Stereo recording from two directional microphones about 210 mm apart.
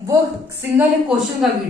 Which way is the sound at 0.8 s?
5° right (ahead or behind).